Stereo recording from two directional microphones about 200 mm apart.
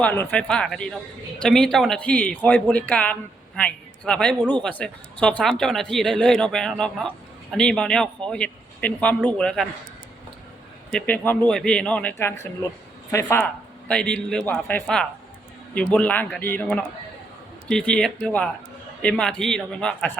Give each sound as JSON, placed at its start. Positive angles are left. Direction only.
{"t": 0.0, "sound": "speech", "side_deg": 10}
{"t": 10.9, "sound": "a man's voice", "side_deg": 10}